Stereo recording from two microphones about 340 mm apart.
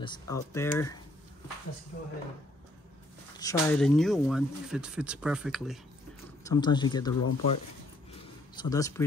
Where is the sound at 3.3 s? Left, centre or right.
Centre.